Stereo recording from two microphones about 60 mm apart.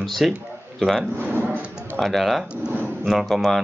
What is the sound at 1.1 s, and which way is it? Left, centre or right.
Speech, right.